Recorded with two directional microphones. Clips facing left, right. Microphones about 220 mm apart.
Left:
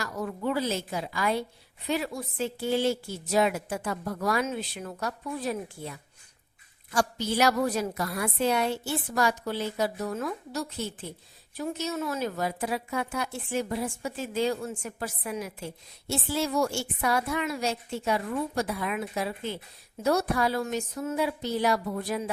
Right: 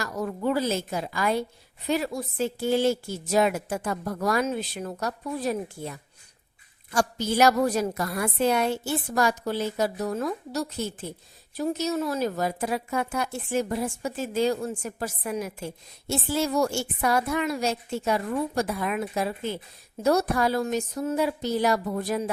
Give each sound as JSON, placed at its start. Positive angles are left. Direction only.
{"t": 0.0, "sound": "a woman's voice", "side_deg": -40}